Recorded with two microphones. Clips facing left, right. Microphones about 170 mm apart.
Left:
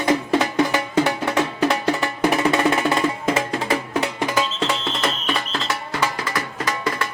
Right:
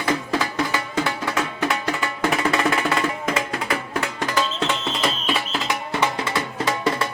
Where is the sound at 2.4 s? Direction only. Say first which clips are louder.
Left 3 dB; 20° left (ahead or behind).